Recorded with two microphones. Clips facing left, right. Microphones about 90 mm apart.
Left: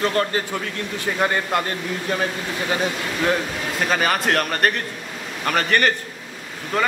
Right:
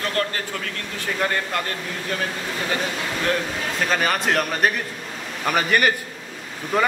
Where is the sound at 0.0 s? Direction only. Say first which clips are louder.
Left 4 dB; 20° left (ahead or behind).